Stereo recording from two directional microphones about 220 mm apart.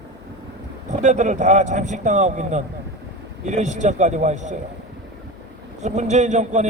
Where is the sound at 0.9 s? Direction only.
30° right (ahead or behind).